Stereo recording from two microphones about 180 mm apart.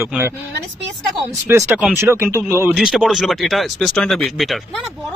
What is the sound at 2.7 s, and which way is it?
A man's voice, centre (ahead or behind).